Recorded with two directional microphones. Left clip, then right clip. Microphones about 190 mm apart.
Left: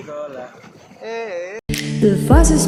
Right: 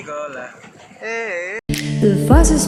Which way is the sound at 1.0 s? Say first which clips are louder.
Right 3 dB; 10° right (ahead or behind).